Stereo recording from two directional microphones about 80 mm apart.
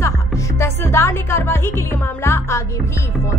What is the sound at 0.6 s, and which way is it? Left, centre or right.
A woman's voice, left.